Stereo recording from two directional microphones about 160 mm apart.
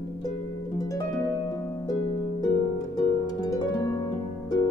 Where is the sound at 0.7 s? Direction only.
20° left (ahead or behind).